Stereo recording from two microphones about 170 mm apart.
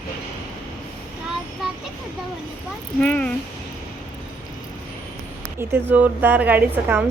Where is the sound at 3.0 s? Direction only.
5° left (ahead or behind).